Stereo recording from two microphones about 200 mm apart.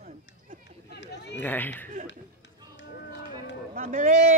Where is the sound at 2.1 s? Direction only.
65° left (ahead or behind).